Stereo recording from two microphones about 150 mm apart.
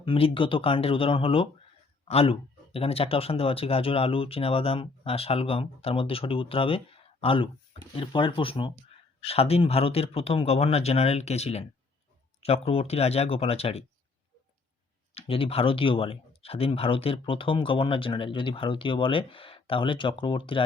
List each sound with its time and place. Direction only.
0.0 s speech: 35° left (ahead or behind)
15.1 s speech: 40° left (ahead or behind)